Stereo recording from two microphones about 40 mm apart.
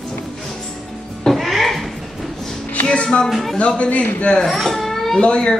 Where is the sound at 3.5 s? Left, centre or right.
Left.